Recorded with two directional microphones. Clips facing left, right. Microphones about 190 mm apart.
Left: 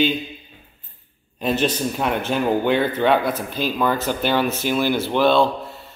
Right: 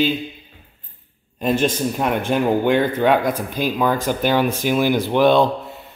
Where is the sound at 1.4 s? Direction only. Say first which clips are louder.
Right 2 dB; 10° right (ahead or behind).